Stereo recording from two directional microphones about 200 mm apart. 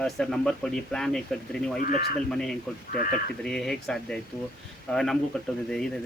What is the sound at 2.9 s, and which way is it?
Speech, 45° left (ahead or behind).